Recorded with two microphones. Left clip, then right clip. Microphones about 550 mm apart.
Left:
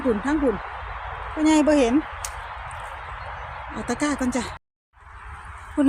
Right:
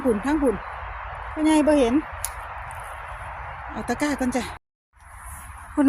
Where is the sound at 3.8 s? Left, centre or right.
Right.